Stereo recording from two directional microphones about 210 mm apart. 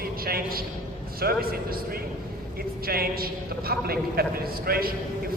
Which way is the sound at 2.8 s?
45° right (ahead or behind).